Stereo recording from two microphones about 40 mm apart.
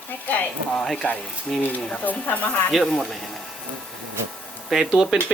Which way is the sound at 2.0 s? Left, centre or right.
Left.